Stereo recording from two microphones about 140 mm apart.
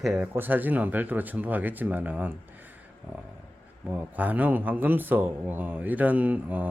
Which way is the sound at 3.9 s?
10° right (ahead or behind).